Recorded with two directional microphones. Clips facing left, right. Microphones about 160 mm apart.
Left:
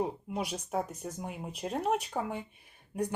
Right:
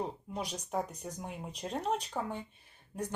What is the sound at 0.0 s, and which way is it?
Speech, 10° left (ahead or behind).